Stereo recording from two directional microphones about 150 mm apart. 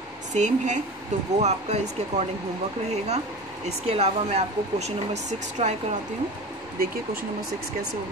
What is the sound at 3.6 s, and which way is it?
Speech, 45° right (ahead or behind).